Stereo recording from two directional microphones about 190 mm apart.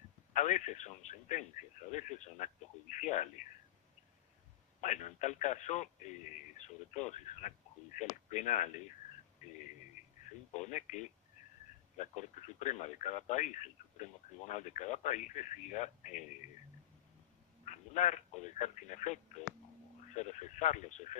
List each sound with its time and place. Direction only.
0.3 s speech: 40° left (ahead or behind)
4.8 s speech: 40° left (ahead or behind)
10.0 s a sound: 40° left (ahead or behind)
10.5 s speech: 40° left (ahead or behind)
17.6 s speech: 40° left (ahead or behind)